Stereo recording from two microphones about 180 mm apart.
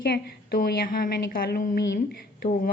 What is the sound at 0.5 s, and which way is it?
A woman's voice, 55° left (ahead or behind).